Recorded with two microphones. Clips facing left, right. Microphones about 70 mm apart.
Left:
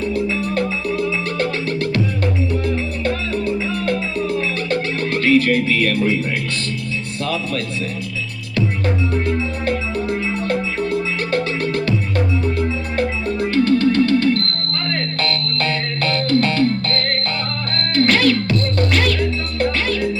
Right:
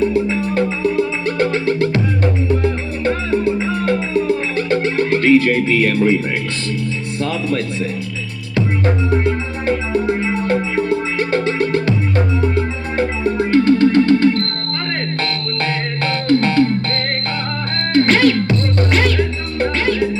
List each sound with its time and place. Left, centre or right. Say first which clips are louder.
0.0 s music: right 4 dB; right
9.2 s music: right 2 dB; right